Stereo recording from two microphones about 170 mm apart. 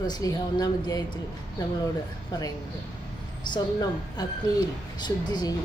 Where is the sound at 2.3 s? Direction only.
20° left (ahead or behind).